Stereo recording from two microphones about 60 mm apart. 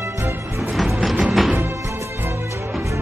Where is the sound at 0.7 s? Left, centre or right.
Centre.